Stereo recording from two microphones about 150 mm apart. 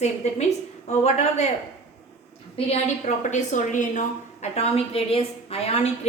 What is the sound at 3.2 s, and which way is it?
A woman's voice, 55° left (ahead or behind).